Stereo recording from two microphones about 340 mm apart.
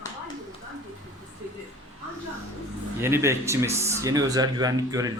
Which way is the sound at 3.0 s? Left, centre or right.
Centre.